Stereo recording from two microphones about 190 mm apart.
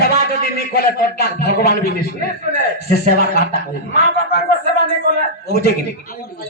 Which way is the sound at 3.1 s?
55° left (ahead or behind).